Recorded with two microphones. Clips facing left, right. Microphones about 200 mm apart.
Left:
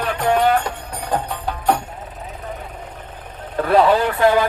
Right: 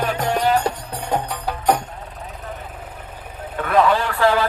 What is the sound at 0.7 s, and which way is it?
Music, 30° right (ahead or behind).